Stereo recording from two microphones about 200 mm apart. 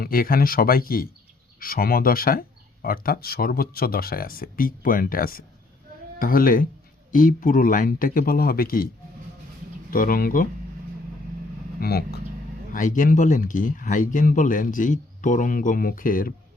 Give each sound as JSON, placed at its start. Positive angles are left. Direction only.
{"t": 0.0, "sound": "speech", "side_deg": 45}
{"t": 9.9, "sound": "speech", "side_deg": 45}
{"t": 11.8, "sound": "speech", "side_deg": 50}
{"t": 12.7, "sound": "speech", "side_deg": 40}